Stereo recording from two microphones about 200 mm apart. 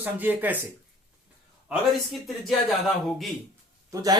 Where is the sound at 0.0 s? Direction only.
10° right (ahead or behind).